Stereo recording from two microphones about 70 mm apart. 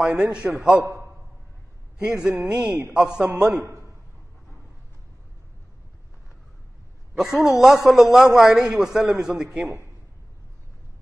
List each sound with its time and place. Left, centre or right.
0.0 s a man's voice: centre
3.5 s a man's voice: right
7.2 s a man's voice: centre